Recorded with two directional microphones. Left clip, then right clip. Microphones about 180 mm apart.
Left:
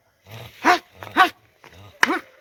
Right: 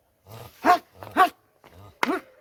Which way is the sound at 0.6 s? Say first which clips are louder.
Left 2 dB; 60° right (ahead or behind).